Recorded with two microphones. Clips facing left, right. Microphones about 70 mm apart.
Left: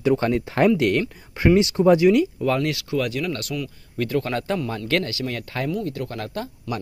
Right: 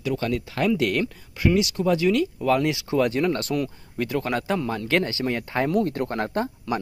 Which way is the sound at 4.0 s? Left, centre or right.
Centre.